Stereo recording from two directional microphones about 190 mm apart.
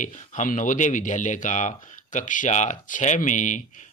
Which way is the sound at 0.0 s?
40° left (ahead or behind).